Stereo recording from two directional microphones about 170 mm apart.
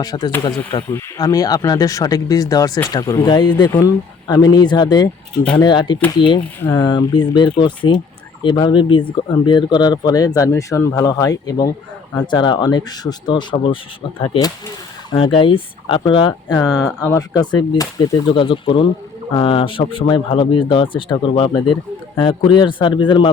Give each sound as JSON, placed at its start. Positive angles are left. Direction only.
{"t": 0.0, "sound": "speech", "side_deg": 20}
{"t": 5.4, "sound": "speech", "side_deg": 5}
{"t": 5.6, "sound": "speech", "side_deg": 25}
{"t": 15.1, "sound": "speech", "side_deg": 30}
{"t": 18.3, "sound": "speech", "side_deg": 30}